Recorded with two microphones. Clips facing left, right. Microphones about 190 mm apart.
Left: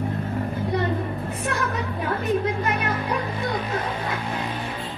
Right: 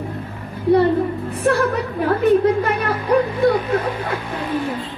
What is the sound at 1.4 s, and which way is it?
Speech, 30° right (ahead or behind).